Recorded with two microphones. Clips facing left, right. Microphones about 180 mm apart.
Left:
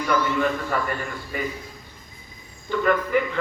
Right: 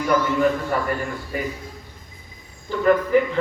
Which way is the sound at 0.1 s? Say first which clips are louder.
Right 3 dB; 45° right (ahead or behind).